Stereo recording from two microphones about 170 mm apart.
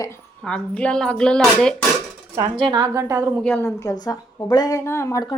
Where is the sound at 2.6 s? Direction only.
25° right (ahead or behind).